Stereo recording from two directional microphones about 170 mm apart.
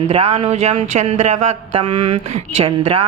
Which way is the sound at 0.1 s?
35° right (ahead or behind).